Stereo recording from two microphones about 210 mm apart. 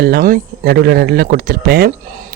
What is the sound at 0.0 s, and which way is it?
Speech, 45° right (ahead or behind).